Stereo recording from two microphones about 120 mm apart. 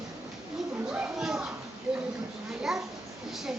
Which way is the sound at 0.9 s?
10° right (ahead or behind).